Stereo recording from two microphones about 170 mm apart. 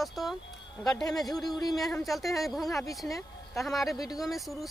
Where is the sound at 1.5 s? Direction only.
25° left (ahead or behind).